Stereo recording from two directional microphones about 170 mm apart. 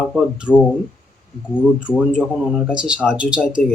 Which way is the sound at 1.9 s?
Centre (ahead or behind).